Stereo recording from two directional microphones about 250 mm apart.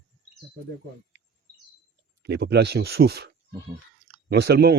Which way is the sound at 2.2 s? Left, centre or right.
Right.